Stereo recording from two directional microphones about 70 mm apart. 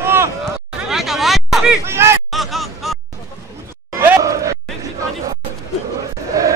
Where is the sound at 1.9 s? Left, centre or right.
Right.